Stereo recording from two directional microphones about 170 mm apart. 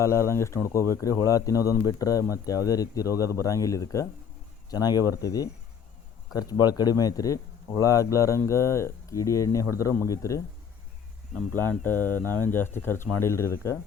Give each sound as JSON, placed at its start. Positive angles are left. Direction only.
{"t": 0.0, "sound": "speech", "side_deg": 15}